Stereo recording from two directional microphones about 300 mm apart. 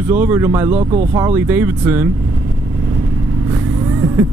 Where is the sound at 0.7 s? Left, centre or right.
Right.